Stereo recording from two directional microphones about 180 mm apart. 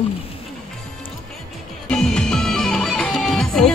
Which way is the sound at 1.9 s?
5° left (ahead or behind).